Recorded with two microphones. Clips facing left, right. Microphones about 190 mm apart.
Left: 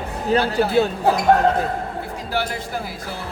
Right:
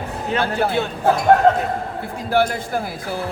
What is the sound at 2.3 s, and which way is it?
Speech, 55° right (ahead or behind).